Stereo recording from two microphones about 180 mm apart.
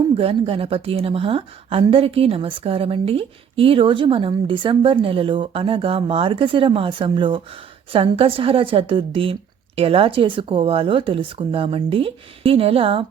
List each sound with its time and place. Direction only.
0.2 s a woman's voice: 30° right (ahead or behind)